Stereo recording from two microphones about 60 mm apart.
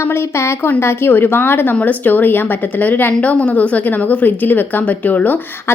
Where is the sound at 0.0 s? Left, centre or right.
Left.